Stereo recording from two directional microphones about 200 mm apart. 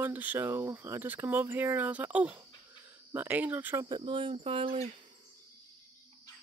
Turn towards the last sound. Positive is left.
turn(degrees=-30)  # may be behind; listen again after turning